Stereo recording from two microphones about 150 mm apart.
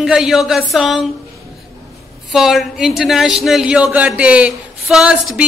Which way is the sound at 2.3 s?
Centre (ahead or behind).